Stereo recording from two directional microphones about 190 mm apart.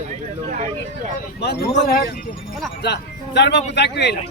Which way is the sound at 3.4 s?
65° left (ahead or behind).